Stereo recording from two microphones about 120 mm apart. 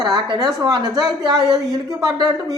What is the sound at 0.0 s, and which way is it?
A woman's voice, 40° right (ahead or behind).